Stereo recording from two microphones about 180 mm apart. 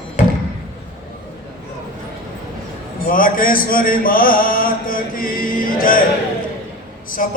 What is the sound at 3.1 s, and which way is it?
Chant, 50° left (ahead or behind).